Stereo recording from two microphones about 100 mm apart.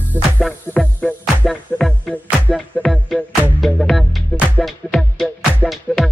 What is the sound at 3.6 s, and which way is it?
Music, centre (ahead or behind).